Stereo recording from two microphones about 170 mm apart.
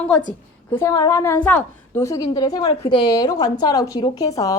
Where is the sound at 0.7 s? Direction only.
15° left (ahead or behind).